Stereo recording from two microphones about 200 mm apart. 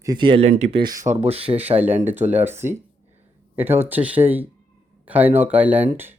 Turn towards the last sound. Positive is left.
turn(degrees=-10)  # may be behind; listen again after turning